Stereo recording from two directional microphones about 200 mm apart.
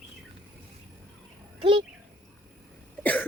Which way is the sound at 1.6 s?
25° right (ahead or behind).